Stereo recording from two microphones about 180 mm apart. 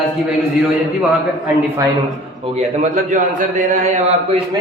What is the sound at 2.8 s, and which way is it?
A man's voice, 45° right (ahead or behind).